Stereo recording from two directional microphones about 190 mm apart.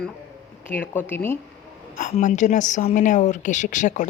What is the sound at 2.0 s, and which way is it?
A woman's voice, 40° left (ahead or behind).